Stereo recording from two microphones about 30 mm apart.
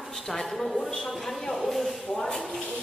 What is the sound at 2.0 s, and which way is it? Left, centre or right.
Speech, left.